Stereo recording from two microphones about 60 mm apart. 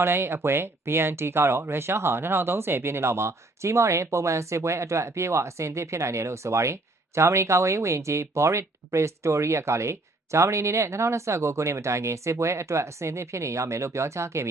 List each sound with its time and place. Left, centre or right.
0.0 s speech: right